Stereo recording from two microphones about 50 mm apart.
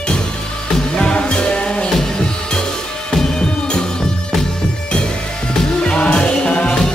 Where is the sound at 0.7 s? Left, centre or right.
Centre.